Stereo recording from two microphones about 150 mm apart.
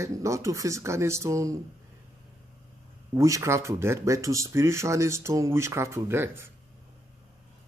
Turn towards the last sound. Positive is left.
turn(degrees=-15)  # may be behind; listen again after turning